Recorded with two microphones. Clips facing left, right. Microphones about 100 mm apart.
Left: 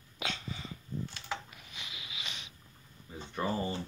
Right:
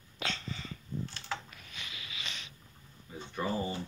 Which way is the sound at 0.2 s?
10° left (ahead or behind).